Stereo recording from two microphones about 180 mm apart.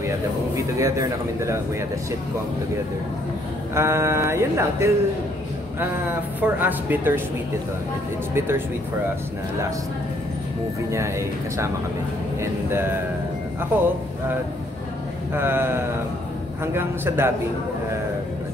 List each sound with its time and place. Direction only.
0.6 s speech: 15° right (ahead or behind)
3.7 s speech: 15° right (ahead or behind)
6.4 s speech: 10° right (ahead or behind)
8.4 s speech: 15° right (ahead or behind)
10.9 s speech: 15° right (ahead or behind)
15.3 s speech: 10° right (ahead or behind)